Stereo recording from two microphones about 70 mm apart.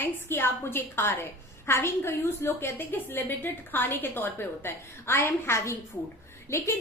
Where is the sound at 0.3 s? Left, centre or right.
Left.